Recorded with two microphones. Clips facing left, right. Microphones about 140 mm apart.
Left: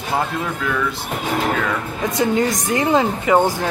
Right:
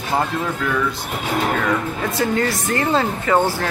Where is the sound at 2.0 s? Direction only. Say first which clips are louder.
Left 4 dB; 15° left (ahead or behind).